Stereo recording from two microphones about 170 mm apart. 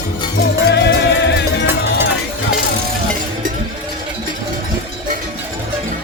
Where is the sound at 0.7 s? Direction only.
80° left.